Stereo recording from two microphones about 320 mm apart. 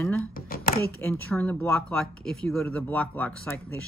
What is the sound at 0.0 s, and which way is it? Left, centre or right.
Speech, centre.